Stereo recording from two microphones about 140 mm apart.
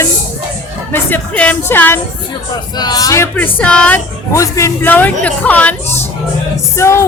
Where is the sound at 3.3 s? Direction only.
10° left (ahead or behind).